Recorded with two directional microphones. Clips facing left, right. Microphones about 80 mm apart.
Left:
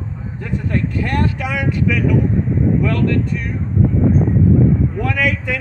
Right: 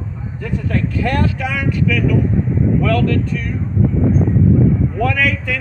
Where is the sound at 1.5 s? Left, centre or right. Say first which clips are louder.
Even; left.